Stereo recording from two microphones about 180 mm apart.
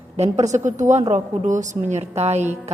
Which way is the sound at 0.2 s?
40° right (ahead or behind).